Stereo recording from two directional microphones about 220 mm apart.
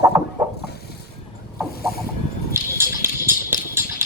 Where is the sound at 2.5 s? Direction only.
10° right (ahead or behind).